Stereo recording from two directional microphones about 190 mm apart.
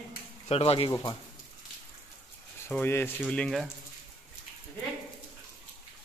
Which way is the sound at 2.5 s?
10° left (ahead or behind).